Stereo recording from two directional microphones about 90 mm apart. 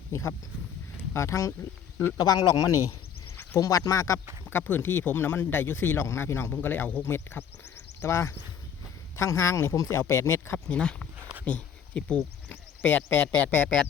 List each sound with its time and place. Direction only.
0.1 s speech: 30° left (ahead or behind)
2.1 s speech: 45° left (ahead or behind)
4.4 s speech: 25° left (ahead or behind)
10.7 s speech: 10° left (ahead or behind)
11.2 s a sound: 20° right (ahead or behind)
11.4 s speech: 15° left (ahead or behind)